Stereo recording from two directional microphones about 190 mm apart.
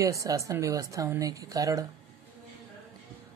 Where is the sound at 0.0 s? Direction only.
15° right (ahead or behind).